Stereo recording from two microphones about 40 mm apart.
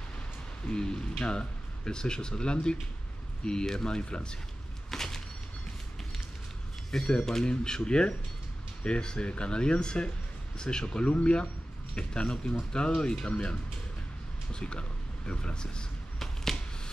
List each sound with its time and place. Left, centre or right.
0.7 s speech: left
4.9 s a sound: centre
6.9 s speech: centre